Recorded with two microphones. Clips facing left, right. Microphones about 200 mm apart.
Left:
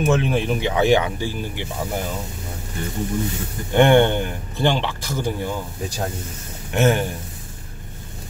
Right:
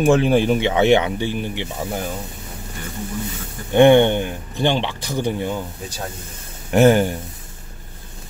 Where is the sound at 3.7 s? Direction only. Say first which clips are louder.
Right 3 dB; 15° right (ahead or behind).